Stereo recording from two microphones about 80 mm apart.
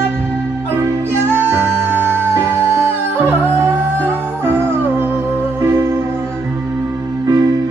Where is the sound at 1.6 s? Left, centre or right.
Right.